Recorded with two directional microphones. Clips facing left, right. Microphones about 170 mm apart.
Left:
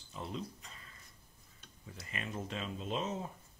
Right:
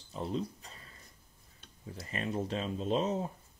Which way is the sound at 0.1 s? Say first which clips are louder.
Right 6 dB; 35° right (ahead or behind).